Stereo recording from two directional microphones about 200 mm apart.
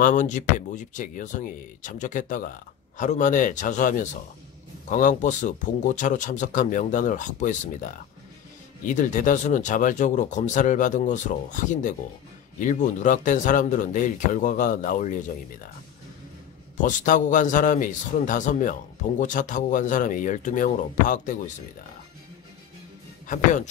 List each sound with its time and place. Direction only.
0.0 s a man's voice: 40° left (ahead or behind)
16.8 s a man's voice: 40° left (ahead or behind)
23.2 s a man's voice: 40° left (ahead or behind)